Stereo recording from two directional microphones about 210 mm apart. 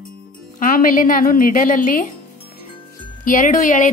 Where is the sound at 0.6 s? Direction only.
40° left (ahead or behind).